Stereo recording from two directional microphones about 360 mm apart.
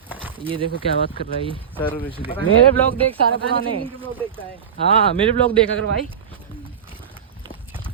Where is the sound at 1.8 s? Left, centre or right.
Centre.